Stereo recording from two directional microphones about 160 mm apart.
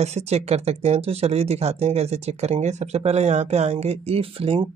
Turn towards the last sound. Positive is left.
turn(degrees=-35)  # may be behind; listen again after turning